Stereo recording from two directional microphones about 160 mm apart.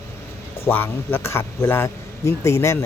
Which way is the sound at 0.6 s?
15° left (ahead or behind).